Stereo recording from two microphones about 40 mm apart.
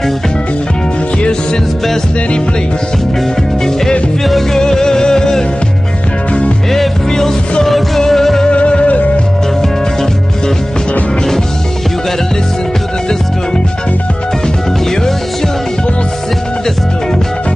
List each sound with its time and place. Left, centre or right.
4.2 s music: centre
7.1 s music: centre
8.5 s music: left